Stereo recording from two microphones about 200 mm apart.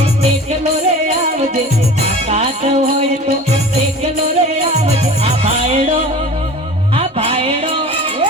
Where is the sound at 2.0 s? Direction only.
30° right (ahead or behind).